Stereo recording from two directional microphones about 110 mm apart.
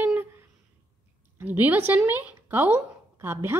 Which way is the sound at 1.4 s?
15° right (ahead or behind).